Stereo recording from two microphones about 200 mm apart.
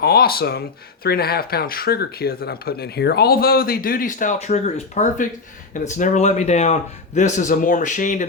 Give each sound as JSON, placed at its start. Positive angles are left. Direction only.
{"t": 0.0, "sound": "a man's voice", "side_deg": 50}